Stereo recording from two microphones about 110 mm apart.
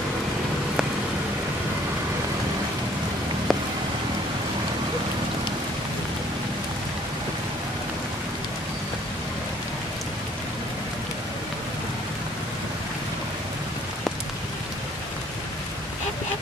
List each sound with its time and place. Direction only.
3.5 s rain: centre (ahead or behind)